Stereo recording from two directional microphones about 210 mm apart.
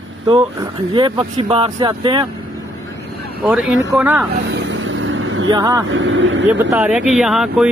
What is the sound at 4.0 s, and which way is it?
Speech, 5° right (ahead or behind).